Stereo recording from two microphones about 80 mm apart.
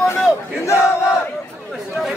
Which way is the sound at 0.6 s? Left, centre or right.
Left.